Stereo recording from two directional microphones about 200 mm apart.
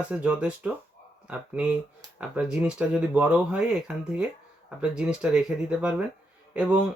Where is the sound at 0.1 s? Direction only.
5° right (ahead or behind).